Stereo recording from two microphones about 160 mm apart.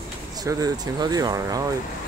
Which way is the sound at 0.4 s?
20° right (ahead or behind).